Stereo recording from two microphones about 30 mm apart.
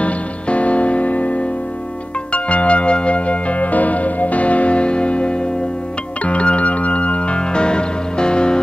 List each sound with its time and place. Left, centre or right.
0.0 s music: left
6.2 s music: left